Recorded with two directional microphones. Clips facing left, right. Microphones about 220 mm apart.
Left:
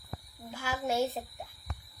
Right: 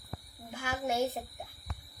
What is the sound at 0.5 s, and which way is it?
Child singing, 15° right (ahead or behind).